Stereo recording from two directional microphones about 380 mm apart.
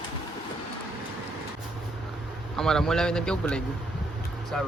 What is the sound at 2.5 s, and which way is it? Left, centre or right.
A man's voice, centre.